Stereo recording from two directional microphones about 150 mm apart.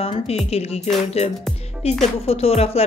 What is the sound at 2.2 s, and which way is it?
Speech, 40° left (ahead or behind).